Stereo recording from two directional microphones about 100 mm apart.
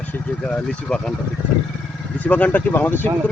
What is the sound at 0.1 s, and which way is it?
Speech, 10° left (ahead or behind).